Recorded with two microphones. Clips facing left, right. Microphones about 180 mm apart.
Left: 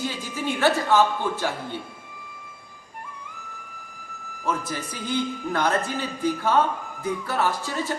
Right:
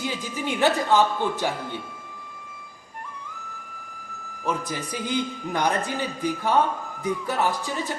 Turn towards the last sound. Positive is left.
turn(degrees=-15)  # may be behind; listen again after turning